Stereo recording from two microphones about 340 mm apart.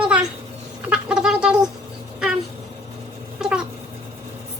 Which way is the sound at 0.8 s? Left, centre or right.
Centre.